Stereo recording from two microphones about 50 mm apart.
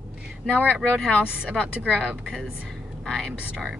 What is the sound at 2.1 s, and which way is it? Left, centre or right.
Speech, centre.